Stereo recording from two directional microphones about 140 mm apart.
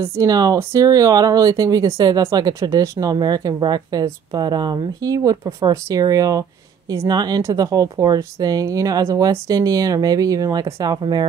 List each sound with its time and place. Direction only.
0.0 s speech: 20° right (ahead or behind)